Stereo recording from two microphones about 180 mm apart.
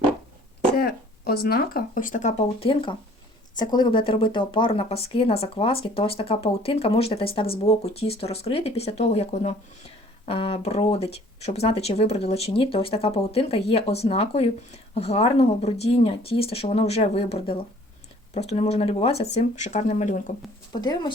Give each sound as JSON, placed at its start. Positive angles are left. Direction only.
{"t": 0.8, "sound": "speech", "side_deg": 60}
{"t": 20.8, "sound": "speech", "side_deg": 25}